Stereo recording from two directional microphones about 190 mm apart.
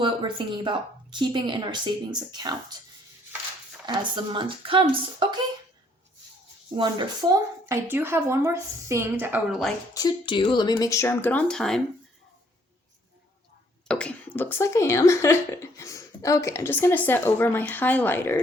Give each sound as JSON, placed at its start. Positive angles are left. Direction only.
{"t": 0.0, "sound": "a woman's voice", "side_deg": -25}
{"t": 3.8, "sound": "a woman's voice", "side_deg": -25}
{"t": 6.7, "sound": "a woman's voice", "side_deg": -20}
{"t": 9.9, "sound": "speech", "side_deg": 20}
{"t": 13.8, "sound": "speech", "side_deg": 5}